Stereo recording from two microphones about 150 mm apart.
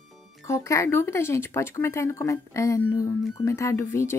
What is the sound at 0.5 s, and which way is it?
Speech, 20° left (ahead or behind).